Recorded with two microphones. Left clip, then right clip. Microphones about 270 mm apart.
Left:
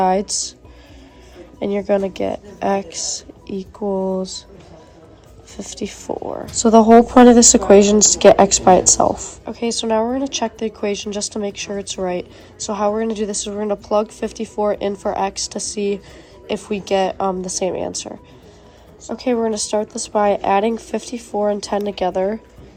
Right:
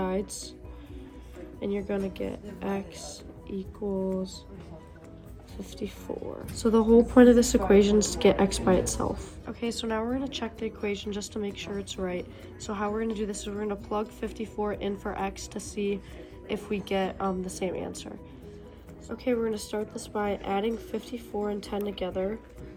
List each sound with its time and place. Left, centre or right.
0.0 s a woman's voice: left
1.5 s a woman's voice: left
5.5 s a woman's voice: left
19.1 s a woman's voice: left